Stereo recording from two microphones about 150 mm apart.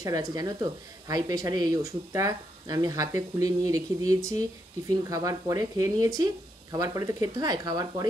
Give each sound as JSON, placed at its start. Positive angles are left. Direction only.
{"t": 0.0, "sound": "speech", "side_deg": -25}